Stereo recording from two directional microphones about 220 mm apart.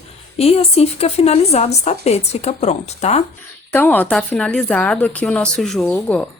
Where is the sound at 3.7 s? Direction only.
10° left (ahead or behind).